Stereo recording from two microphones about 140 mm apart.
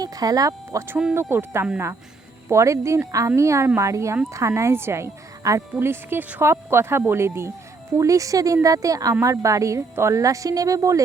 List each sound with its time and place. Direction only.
0.0 s speech: 25° right (ahead or behind)